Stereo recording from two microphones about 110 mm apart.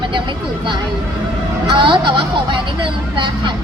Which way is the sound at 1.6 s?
50° right (ahead or behind).